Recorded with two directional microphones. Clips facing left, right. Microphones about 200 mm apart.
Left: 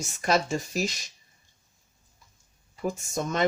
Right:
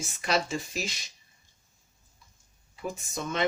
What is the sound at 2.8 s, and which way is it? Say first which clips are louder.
Speech: left 5 dB; 45° left (ahead or behind).